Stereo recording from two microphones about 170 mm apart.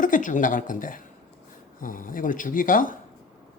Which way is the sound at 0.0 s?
50° left (ahead or behind).